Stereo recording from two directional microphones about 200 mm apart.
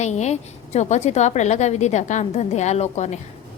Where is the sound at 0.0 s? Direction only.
35° left (ahead or behind).